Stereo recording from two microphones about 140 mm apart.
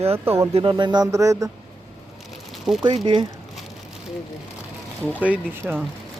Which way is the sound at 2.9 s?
35° right (ahead or behind).